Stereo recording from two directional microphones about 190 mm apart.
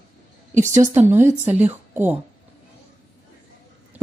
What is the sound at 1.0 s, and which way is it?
Speech, 15° right (ahead or behind).